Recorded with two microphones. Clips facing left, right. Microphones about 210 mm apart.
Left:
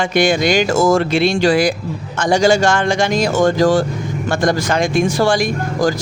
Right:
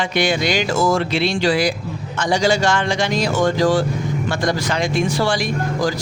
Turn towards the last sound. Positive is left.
turn(degrees=45)  # may be behind; listen again after turning